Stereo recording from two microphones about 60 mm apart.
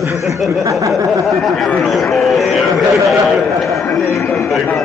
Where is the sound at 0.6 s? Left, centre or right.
Right.